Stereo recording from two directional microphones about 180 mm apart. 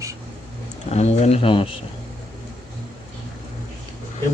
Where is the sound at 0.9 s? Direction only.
40° left (ahead or behind).